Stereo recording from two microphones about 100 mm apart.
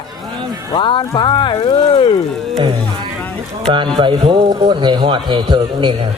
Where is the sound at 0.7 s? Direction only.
55° left (ahead or behind).